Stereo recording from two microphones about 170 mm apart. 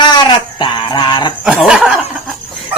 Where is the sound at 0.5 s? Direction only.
30° left (ahead or behind).